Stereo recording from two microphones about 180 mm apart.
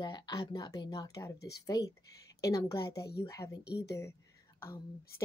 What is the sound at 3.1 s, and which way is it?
A woman's voice, 20° left (ahead or behind).